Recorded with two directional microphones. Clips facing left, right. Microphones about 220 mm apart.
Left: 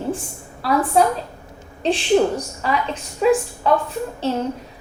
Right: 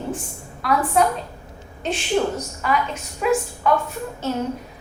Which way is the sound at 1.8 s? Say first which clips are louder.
Left 5 dB; 30° left (ahead or behind).